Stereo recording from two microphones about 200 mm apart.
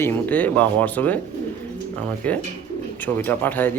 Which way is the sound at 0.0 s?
10° left (ahead or behind).